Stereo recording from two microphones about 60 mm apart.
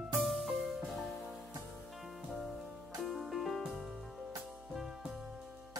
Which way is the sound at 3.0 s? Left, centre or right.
Centre.